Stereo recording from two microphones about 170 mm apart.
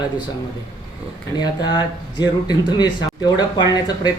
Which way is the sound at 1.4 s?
25° left (ahead or behind).